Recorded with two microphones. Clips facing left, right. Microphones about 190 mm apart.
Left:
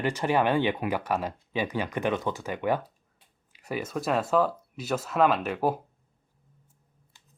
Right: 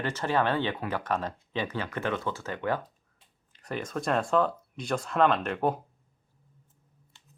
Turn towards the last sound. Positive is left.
turn(degrees=5)  # may be behind; listen again after turning